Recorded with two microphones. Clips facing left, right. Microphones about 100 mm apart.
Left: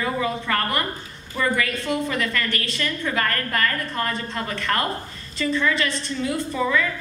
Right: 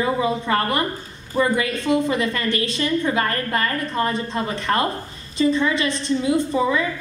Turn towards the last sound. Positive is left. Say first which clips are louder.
# right 3 dB
turn(degrees=-20)  # may be behind; listen again after turning